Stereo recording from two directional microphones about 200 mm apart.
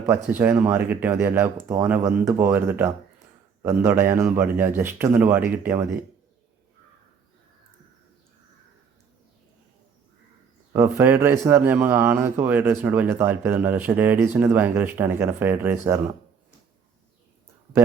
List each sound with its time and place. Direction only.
0.3 s a man's voice: 10° right (ahead or behind)
10.7 s a man's voice: 15° right (ahead or behind)